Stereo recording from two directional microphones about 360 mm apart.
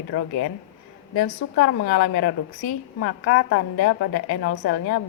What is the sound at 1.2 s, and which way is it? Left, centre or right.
Speech, left.